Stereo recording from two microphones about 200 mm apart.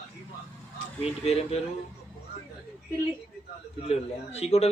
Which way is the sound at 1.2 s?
30° left (ahead or behind).